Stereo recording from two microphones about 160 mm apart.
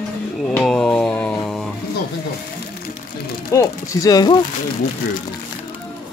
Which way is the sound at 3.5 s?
20° left (ahead or behind).